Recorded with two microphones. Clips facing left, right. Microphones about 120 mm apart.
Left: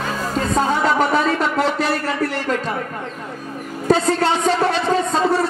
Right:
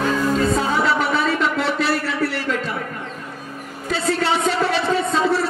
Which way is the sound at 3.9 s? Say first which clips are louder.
Left 4 dB; 45° left (ahead or behind).